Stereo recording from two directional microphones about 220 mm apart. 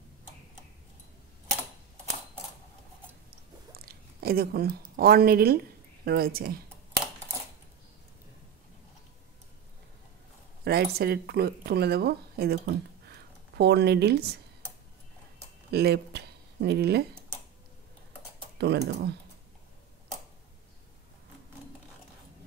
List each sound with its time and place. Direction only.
3.3 s chewing: 45° right (ahead or behind)
6.0 s speech: 45° right (ahead or behind)
10.6 s speech: 45° right (ahead or behind)
15.7 s speech: 45° right (ahead or behind)
18.6 s speech: 50° right (ahead or behind)